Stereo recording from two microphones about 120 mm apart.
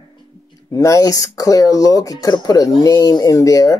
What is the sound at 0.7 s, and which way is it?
Speech, 25° left (ahead or behind).